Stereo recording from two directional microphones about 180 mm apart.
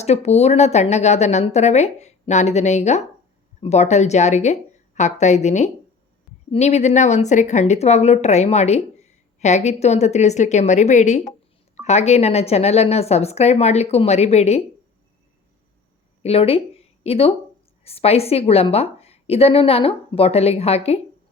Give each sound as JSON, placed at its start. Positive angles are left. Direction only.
{"t": 0.0, "sound": "speech", "side_deg": 35}
{"t": 16.2, "sound": "speech", "side_deg": 35}